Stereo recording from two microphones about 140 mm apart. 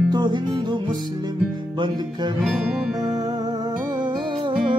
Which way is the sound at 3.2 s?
25° right (ahead or behind).